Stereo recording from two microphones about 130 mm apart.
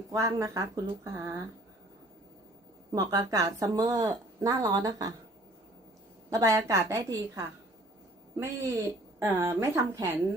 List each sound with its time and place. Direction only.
0.1 s speech: 25° right (ahead or behind)
2.9 s speech: 25° right (ahead or behind)
6.3 s speech: 25° right (ahead or behind)